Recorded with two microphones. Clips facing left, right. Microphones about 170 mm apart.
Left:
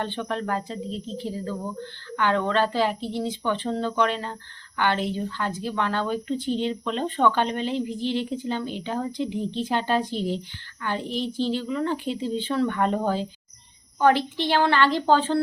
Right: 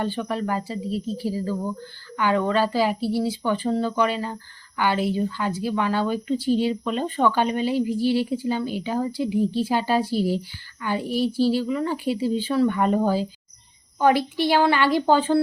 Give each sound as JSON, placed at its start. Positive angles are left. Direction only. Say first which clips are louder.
{"t": 0.0, "sound": "speech", "louder": "right 3 dB", "side_deg": -5}